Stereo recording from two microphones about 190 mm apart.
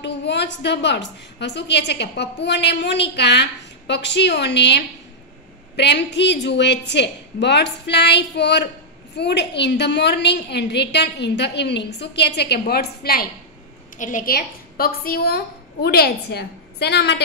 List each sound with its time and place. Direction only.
0.0 s a woman's voice: 65° left (ahead or behind)